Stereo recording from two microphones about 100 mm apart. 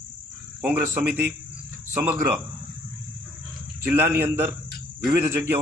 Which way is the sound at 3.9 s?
25° right (ahead or behind).